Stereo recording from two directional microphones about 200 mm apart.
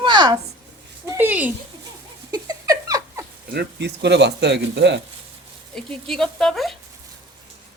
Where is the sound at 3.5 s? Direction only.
55° right (ahead or behind).